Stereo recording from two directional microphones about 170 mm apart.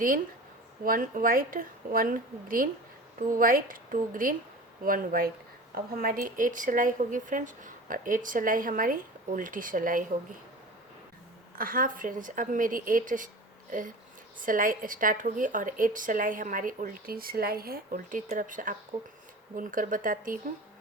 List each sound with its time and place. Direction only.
0.9 s a woman's voice: 55° right (ahead or behind)
11.5 s a woman's voice: 55° right (ahead or behind)